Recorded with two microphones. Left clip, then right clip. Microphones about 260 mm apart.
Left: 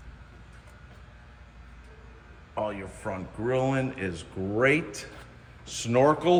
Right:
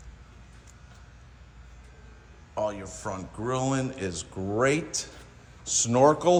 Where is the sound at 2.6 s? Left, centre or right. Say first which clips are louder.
Right 1 dB; centre.